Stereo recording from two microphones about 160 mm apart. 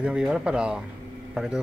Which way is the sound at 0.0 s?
5° right (ahead or behind).